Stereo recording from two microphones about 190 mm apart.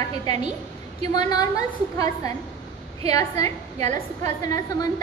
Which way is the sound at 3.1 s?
20° left (ahead or behind).